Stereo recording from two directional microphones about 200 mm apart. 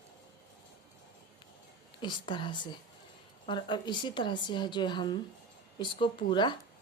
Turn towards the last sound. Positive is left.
turn(degrees=25)  # may be behind; listen again after turning